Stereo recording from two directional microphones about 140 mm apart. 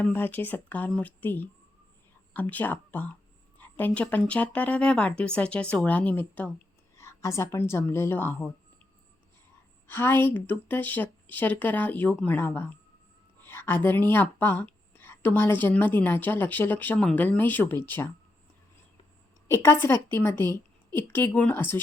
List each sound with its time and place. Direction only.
0.0 s a woman's voice: 15° left (ahead or behind)
9.8 s speech: 15° left (ahead or behind)
19.5 s speech: 20° left (ahead or behind)